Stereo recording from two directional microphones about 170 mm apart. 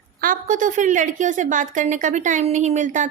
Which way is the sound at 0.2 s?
50° right (ahead or behind).